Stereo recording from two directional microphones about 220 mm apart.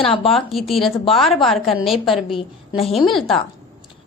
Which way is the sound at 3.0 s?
Centre (ahead or behind).